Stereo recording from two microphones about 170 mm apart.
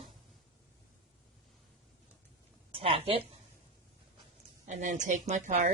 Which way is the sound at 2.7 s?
35° right (ahead or behind).